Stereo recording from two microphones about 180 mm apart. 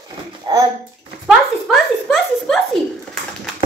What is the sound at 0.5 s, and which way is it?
Speech, 25° right (ahead or behind).